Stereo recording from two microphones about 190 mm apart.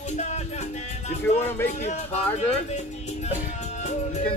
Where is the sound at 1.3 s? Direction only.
10° left (ahead or behind).